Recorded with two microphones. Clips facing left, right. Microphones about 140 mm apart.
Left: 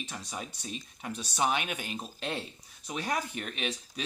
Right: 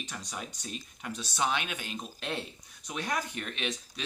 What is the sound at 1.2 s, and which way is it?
Speech, 40° left (ahead or behind).